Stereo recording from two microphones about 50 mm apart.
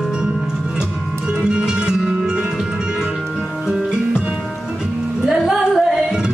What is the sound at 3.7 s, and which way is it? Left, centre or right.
Music, centre.